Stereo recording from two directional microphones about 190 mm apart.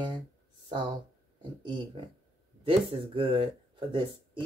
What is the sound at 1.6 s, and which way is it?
Speech, 25° right (ahead or behind).